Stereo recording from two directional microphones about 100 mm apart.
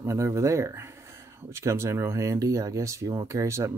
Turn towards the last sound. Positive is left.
turn(degrees=-30)  # may be behind; listen again after turning